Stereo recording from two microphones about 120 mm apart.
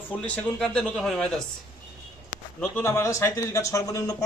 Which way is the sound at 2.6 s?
20° left (ahead or behind).